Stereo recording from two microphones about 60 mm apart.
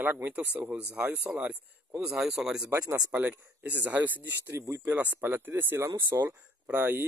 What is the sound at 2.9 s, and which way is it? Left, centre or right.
Speech, right.